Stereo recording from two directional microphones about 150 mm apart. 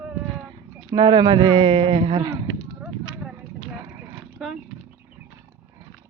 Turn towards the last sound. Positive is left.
turn(degrees=0)  # may be behind; listen again after turning